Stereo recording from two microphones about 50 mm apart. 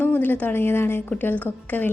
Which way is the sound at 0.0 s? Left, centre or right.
Left.